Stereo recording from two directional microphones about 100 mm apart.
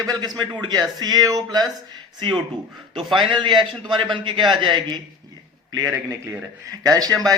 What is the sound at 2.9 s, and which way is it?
Speech, 55° right (ahead or behind).